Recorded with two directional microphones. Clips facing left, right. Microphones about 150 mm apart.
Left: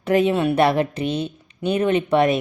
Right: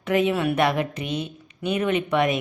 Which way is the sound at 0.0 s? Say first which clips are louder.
Left 3 dB; 35° left (ahead or behind).